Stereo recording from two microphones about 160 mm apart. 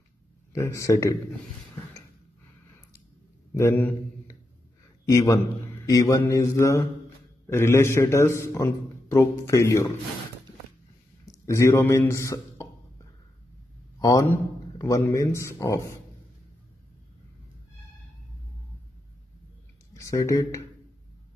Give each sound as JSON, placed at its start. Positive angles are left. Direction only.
{"t": 0.5, "sound": "mantra", "side_deg": 20}
{"t": 3.5, "sound": "a man's voice", "side_deg": 15}
{"t": 5.1, "sound": "mantra", "side_deg": 20}
{"t": 7.4, "sound": "a man's voice", "side_deg": 15}
{"t": 11.2, "sound": "a man's voice", "side_deg": 20}
{"t": 13.9, "sound": "a man's voice", "side_deg": 20}
{"t": 19.9, "sound": "speech", "side_deg": 20}